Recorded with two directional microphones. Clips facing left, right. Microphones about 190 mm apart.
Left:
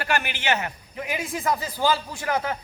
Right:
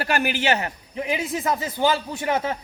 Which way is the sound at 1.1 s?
20° right (ahead or behind).